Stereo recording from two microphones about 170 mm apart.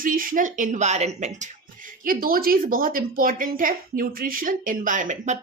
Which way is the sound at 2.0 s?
55° right (ahead or behind).